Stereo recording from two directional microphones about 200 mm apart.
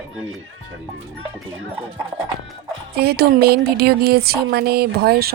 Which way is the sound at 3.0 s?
50° right (ahead or behind).